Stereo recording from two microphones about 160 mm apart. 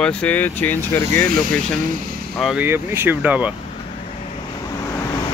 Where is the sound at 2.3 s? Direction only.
Centre (ahead or behind).